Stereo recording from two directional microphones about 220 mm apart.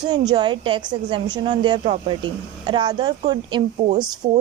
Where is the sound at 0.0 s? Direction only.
20° right (ahead or behind).